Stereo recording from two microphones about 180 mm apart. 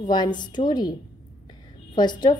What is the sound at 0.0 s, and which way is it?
Speech, 25° left (ahead or behind).